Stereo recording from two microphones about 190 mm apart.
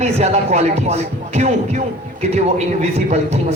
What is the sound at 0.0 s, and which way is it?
Speech, 35° right (ahead or behind).